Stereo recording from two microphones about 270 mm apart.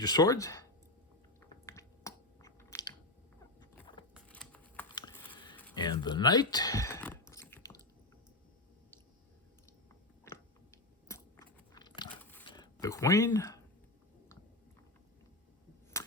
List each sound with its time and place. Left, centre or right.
0.0 s speech: centre
1.4 s chewing: centre
3.6 s a sound: centre
4.1 s shuffling cards: centre
5.7 s chewing: centre
10.3 s a sound: centre
11.1 s biting: centre
12.5 s speech: centre
16.0 s a sound: centre